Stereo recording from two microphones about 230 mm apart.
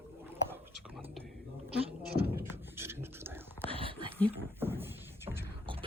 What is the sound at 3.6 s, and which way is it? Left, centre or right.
Whispering, right.